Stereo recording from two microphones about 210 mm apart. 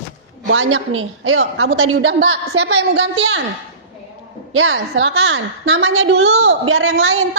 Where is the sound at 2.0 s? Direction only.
55° right (ahead or behind).